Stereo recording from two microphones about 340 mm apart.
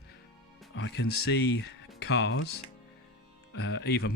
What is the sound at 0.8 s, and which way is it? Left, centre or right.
Speech, left.